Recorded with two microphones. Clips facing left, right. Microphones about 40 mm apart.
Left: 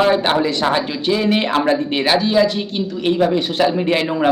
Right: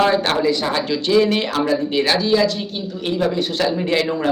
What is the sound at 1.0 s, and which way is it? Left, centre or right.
Speech, centre.